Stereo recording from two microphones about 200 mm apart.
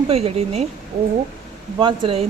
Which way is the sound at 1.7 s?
25° right (ahead or behind).